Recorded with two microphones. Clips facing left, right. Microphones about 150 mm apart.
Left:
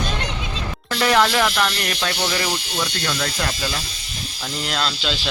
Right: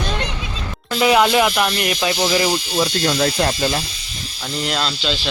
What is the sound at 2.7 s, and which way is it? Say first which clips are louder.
Speech: right 7 dB; 30° right (ahead or behind).